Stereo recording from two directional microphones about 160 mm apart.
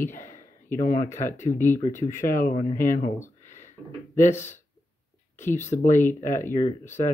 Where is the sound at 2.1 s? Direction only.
55° left (ahead or behind).